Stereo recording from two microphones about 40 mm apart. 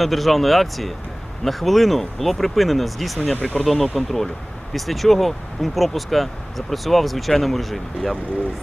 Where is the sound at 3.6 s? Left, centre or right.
Centre.